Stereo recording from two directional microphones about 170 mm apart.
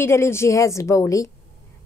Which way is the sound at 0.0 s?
15° left (ahead or behind).